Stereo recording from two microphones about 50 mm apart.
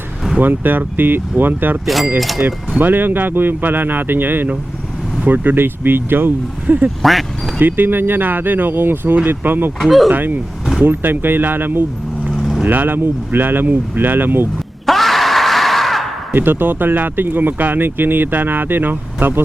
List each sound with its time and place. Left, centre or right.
0.3 s speech: right
2.1 s speech: centre
2.4 s speech: right
7.0 s speech: centre
7.6 s speech: right
9.8 s speech: centre
10.1 s speech: right
12.3 s vehicle: centre
12.6 s speech: right
14.8 s a sound: centre
16.3 s speech: right